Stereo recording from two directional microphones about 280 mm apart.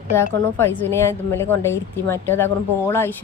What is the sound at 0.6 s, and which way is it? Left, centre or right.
A woman's voice, centre.